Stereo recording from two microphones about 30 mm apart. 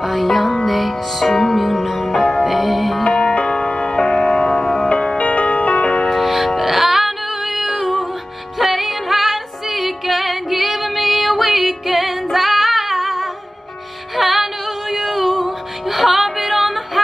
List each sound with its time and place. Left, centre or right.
0.0 s music: centre
3.1 s music: left
5.1 s music: left
6.1 s music: centre